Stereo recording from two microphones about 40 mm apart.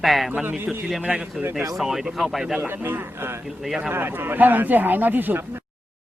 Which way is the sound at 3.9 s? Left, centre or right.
Right.